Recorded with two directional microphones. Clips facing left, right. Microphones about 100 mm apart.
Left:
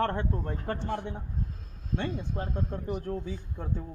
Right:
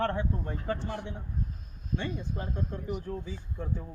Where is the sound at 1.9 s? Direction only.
90° left.